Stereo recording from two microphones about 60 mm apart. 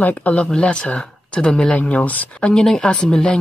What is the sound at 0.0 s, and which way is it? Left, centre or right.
Speech, left.